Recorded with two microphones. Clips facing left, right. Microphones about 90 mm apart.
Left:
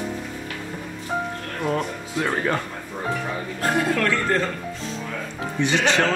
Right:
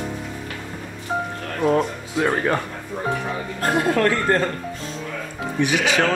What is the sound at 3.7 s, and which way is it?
Speech, 40° right (ahead or behind).